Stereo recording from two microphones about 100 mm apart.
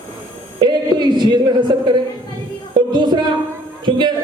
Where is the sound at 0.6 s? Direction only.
50° right (ahead or behind).